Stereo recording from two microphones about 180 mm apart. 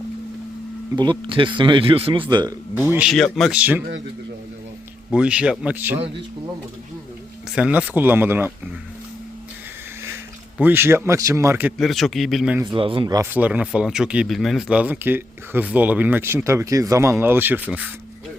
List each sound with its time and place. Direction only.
0.9 s speech: 25° right (ahead or behind)
2.7 s speech: 5° right (ahead or behind)
5.1 s speech: 5° right (ahead or behind)
7.5 s speech: 5° right (ahead or behind)
10.6 s speech: 10° right (ahead or behind)
11.8 s speech: centre (ahead or behind)
12.6 s speech: 30° right (ahead or behind)
13.3 s speech: 10° right (ahead or behind)